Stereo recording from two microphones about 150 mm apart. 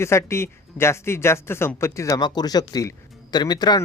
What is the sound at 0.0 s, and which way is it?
Speech, 20° left (ahead or behind).